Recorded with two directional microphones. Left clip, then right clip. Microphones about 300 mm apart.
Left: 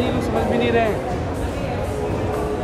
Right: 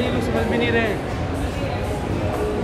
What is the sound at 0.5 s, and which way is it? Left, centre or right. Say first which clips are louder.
Speech: left 2 dB; centre.